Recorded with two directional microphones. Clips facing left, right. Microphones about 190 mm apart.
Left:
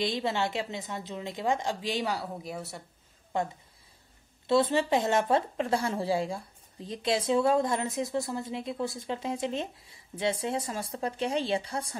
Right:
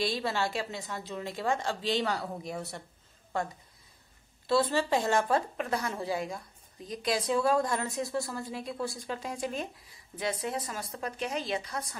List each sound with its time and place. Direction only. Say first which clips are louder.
0.0 s speech: left 1 dB; 20° left (ahead or behind); by 2.8 s 5° left (ahead or behind)
4.5 s speech: left 2 dB; 20° left (ahead or behind)